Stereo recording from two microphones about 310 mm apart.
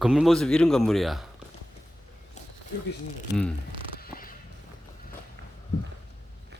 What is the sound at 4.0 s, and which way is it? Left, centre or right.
Creak, left.